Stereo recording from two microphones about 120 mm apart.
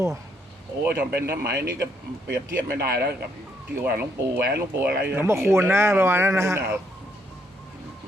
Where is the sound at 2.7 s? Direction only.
20° right (ahead or behind).